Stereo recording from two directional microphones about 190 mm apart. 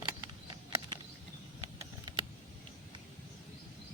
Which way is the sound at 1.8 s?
20° right (ahead or behind).